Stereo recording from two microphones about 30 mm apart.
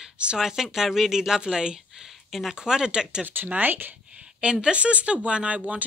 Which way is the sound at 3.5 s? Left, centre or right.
Right.